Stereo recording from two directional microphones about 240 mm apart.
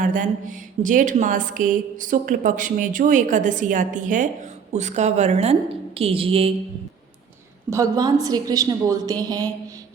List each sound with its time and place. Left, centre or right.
0.0 s a woman's voice: right
7.7 s a woman's voice: centre